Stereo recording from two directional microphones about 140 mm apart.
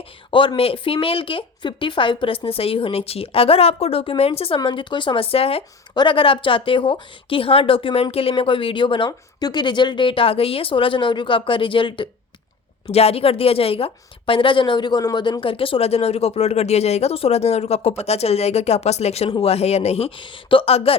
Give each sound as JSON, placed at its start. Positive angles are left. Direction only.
{"t": 0.3, "sound": "a woman's voice", "side_deg": 40}